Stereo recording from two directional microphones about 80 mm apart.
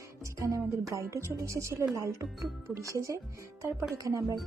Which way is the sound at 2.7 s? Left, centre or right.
Right.